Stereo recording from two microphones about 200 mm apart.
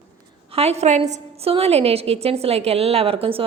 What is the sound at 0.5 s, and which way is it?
A woman's voice, 30° right (ahead or behind).